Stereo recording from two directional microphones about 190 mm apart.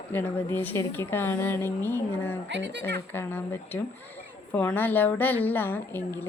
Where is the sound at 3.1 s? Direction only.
10° left (ahead or behind).